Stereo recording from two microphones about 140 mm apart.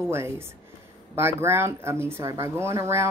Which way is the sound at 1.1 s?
15° right (ahead or behind).